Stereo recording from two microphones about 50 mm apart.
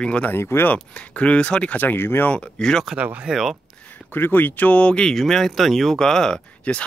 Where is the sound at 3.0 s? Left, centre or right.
Right.